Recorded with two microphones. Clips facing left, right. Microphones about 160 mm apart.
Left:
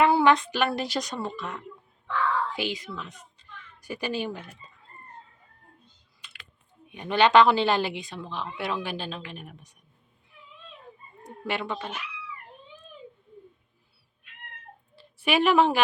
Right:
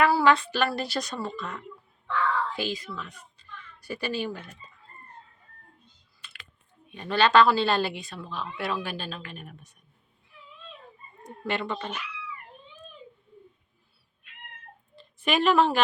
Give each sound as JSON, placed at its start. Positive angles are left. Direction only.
{"t": 0.0, "sound": "a woman's voice", "side_deg": 20}
{"t": 6.2, "sound": "typing", "side_deg": 15}
{"t": 6.8, "sound": "a woman's voice", "side_deg": 15}
{"t": 11.2, "sound": "speech", "side_deg": 10}
{"t": 14.9, "sound": "a woman's voice", "side_deg": 10}